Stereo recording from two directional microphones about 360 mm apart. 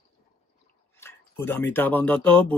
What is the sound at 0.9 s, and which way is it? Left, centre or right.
Speech, centre.